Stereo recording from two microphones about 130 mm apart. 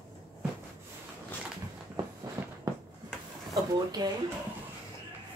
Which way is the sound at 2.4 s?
20° right (ahead or behind).